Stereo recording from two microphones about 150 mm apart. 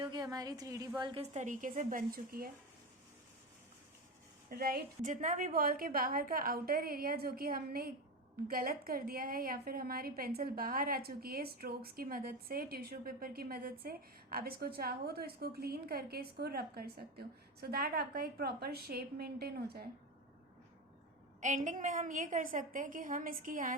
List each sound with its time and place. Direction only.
0.0 s a woman's voice: 30° right (ahead or behind)
1.2 s a woman's voice: 50° right (ahead or behind); by 2.5 s 75° right (ahead or behind)
4.4 s a woman's voice: 80° right
21.4 s a woman's voice: 55° right (ahead or behind)